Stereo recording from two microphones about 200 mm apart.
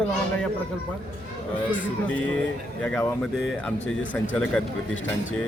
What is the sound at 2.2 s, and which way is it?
Speech, 5° left (ahead or behind).